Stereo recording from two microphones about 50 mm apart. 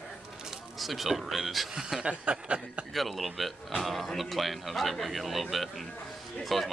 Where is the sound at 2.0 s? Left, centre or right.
Right.